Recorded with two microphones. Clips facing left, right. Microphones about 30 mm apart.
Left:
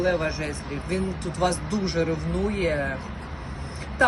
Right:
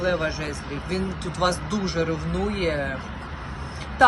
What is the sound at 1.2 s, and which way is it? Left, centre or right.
Speech, right.